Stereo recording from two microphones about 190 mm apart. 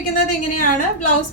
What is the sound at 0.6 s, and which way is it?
Speech, 45° left (ahead or behind).